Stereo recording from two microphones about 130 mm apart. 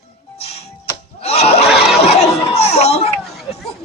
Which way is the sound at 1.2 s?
55° left (ahead or behind).